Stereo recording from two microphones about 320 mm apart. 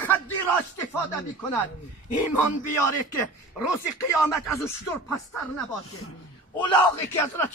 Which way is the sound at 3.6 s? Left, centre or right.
Left.